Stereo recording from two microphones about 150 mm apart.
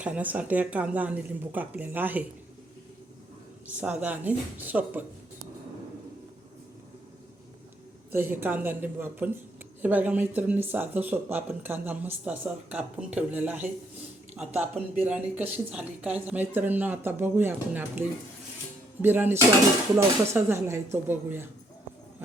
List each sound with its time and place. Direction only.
0.0 s speech: 10° right (ahead or behind)
3.7 s speech: 10° right (ahead or behind)
8.1 s speech: 15° right (ahead or behind)